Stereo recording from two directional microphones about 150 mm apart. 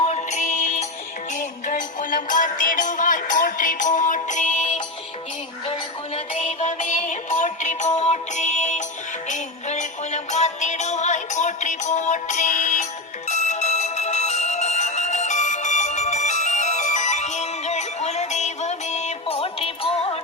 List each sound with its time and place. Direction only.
0.0 s music: 50° left (ahead or behind)